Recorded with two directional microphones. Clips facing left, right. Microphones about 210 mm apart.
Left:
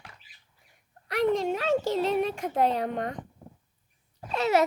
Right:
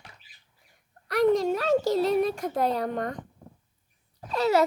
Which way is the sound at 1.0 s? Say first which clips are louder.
Right 3 dB; 40° right (ahead or behind).